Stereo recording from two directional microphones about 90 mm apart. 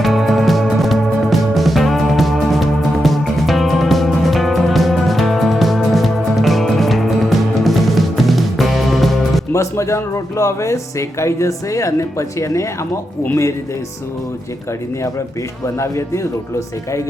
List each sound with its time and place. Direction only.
0.0 s music: centre (ahead or behind)
9.5 s speech: 35° left (ahead or behind)
15.6 s speech: 30° left (ahead or behind)